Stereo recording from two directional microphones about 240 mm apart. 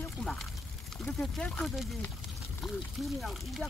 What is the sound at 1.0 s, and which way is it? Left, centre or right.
Speech, centre.